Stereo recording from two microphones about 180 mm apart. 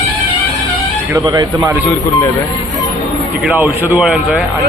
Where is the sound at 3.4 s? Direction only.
10° right (ahead or behind).